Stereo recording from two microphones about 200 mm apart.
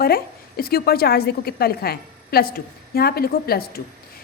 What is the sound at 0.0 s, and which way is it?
A woman's voice, 50° left (ahead or behind).